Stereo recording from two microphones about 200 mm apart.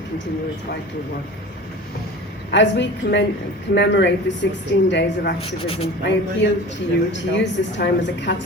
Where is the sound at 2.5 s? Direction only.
65° left (ahead or behind).